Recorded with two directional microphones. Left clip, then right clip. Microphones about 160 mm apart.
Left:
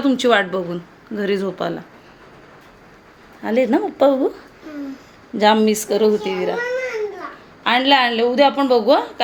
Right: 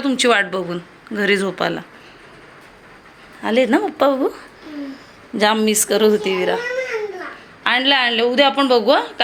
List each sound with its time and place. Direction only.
0.0 s speech: 10° left (ahead or behind)
3.4 s speech: 5° left (ahead or behind)
5.4 s speech: 10° left (ahead or behind)